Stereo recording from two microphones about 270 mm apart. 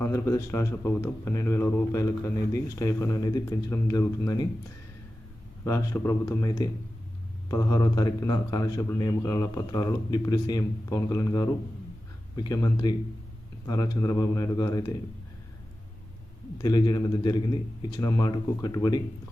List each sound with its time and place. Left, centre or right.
0.0 s speech: centre
5.6 s speech: centre
16.6 s speech: centre